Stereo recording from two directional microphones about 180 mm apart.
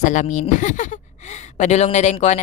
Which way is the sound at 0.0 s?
45° left (ahead or behind).